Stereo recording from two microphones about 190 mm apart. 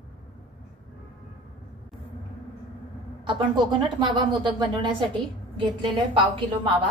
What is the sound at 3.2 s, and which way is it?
Speech, 25° right (ahead or behind).